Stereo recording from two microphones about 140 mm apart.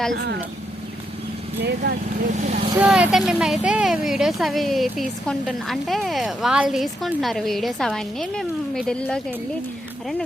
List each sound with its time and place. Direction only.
2.2 s speech: 60° right (ahead or behind)
2.7 s speech: 10° right (ahead or behind)